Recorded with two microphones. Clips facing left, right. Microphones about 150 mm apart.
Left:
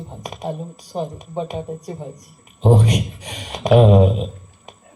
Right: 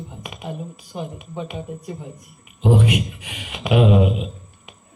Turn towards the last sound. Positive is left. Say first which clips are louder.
# left 3 dB
turn(degrees=35)  # may be behind; listen again after turning